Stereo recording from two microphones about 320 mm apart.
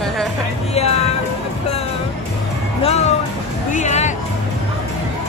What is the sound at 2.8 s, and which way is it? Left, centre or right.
Music, centre.